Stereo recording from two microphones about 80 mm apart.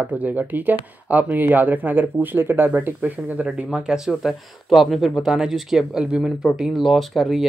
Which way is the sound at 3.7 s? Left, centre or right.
Centre.